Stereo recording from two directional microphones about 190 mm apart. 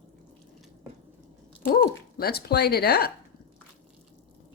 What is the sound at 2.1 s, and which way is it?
Speech, 55° left (ahead or behind).